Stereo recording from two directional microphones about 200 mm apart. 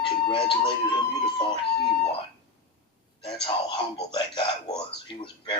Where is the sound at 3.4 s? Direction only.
25° left (ahead or behind).